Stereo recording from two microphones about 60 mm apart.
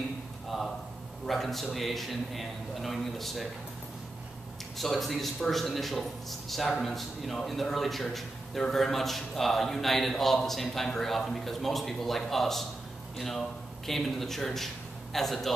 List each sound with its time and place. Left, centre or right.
0.5 s a sound: centre
1.2 s a man's voice: centre
4.7 s a man's voice: centre